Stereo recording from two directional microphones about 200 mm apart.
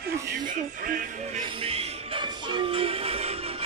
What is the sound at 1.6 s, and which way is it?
Music, 30° right (ahead or behind).